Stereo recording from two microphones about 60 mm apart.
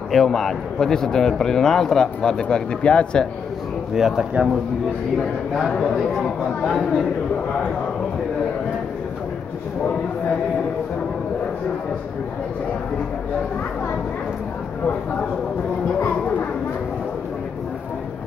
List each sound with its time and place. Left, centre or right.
0.1 s a man's voice: centre
3.9 s speech: centre
5.8 s a man's voice: centre